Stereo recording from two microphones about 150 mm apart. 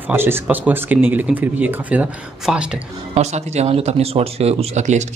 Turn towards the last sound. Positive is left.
turn(degrees=-50)  # may be behind; listen again after turning